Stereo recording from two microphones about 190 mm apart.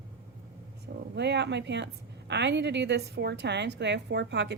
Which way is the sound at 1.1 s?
65° right (ahead or behind).